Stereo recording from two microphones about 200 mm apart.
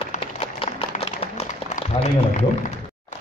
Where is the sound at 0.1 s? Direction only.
30° left (ahead or behind).